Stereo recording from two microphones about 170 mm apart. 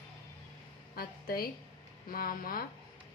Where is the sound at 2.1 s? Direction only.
60° left (ahead or behind).